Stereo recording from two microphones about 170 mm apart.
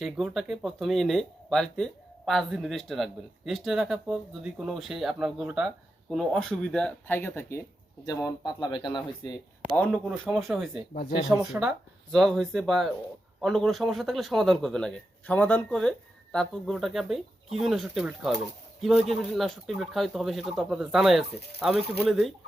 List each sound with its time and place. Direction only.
0.0 s speech: centre (ahead or behind); by 9.4 s 25° left (ahead or behind)
9.8 s speech: 5° right (ahead or behind)
12.1 s speech: centre (ahead or behind)